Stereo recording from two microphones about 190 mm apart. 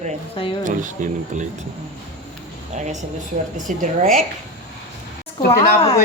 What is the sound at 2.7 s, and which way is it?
A woman's voice, 40° right (ahead or behind).